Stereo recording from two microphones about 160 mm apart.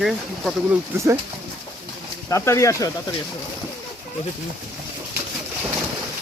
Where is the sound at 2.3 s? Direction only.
20° left (ahead or behind).